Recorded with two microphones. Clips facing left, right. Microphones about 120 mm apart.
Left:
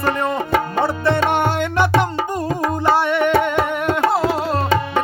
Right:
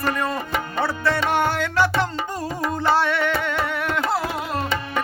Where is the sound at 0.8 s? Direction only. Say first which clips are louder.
Left 2 dB; 20° left (ahead or behind).